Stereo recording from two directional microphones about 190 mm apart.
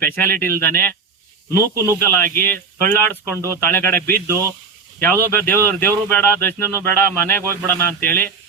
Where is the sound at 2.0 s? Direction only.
10° left (ahead or behind).